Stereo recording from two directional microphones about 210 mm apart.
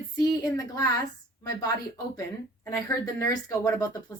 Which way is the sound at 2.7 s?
15° left (ahead or behind).